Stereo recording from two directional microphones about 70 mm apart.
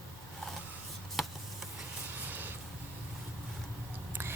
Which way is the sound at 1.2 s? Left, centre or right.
Centre.